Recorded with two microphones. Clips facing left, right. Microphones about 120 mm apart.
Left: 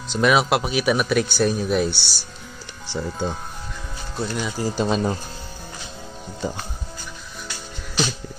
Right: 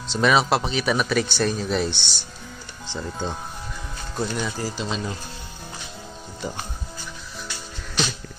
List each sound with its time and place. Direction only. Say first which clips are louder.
0.1 s speech: left 1 dB; 5° left (ahead or behind)
4.5 s speech: left 3 dB; 20° left (ahead or behind)
4.7 s speech: left 7 dB; 50° left (ahead or behind)
7.4 s music: left 1 dB; 5° left (ahead or behind)